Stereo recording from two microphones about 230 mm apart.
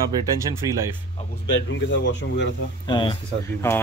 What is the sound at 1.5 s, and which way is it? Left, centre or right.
Speech, left.